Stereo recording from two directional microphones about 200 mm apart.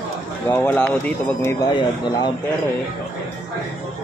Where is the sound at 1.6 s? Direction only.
20° left (ahead or behind).